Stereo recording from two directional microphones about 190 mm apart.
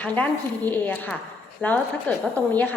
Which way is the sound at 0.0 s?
10° left (ahead or behind).